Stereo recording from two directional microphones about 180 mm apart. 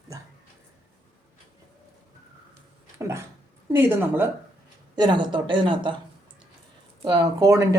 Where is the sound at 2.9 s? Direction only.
15° right (ahead or behind).